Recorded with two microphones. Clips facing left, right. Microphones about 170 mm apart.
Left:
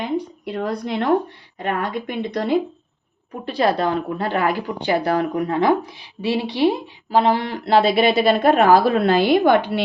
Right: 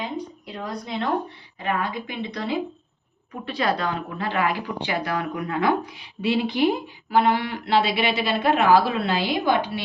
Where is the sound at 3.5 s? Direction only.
35° left (ahead or behind).